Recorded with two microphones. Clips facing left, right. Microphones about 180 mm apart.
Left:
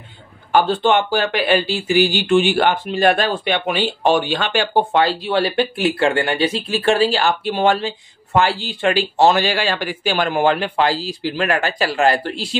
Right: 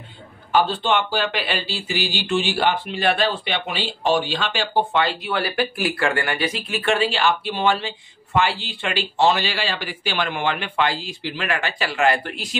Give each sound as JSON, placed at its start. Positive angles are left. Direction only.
{"t": 0.5, "sound": "speech", "side_deg": 50}